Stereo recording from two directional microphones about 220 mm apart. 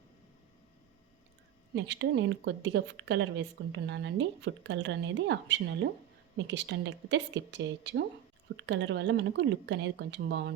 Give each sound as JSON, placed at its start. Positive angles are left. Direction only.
{"t": 1.7, "sound": "a woman's voice", "side_deg": -55}